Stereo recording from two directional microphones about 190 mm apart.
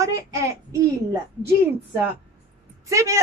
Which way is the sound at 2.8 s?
15° right (ahead or behind).